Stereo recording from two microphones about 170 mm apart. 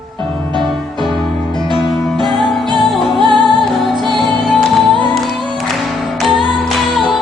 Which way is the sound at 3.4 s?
Centre (ahead or behind).